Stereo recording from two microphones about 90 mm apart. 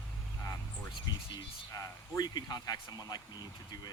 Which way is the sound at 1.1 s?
50° left (ahead or behind).